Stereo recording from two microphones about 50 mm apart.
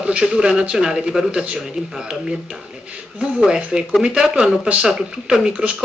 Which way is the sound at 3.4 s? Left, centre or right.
Centre.